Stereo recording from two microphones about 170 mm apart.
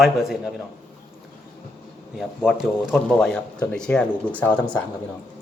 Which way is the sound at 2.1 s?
Centre (ahead or behind).